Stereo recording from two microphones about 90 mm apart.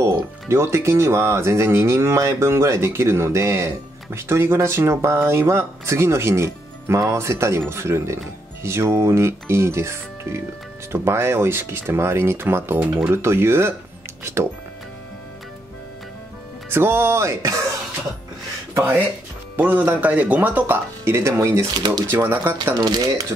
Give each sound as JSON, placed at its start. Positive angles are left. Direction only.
{"t": 0.5, "sound": "speech", "side_deg": -30}
{"t": 16.6, "sound": "speech", "side_deg": -25}
{"t": 19.7, "sound": "speech", "side_deg": -20}
{"t": 21.7, "sound": "speech", "side_deg": -55}
{"t": 22.1, "sound": "speech", "side_deg": -20}
{"t": 22.8, "sound": "speech", "side_deg": -50}